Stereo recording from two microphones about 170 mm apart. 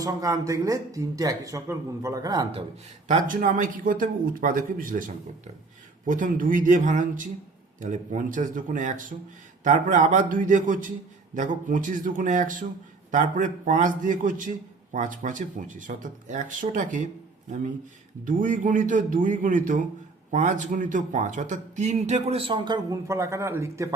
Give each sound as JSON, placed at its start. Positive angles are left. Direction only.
{"t": 0.0, "sound": "speech", "side_deg": -20}
{"t": 3.1, "sound": "speech", "side_deg": -50}
{"t": 18.3, "sound": "speech", "side_deg": -50}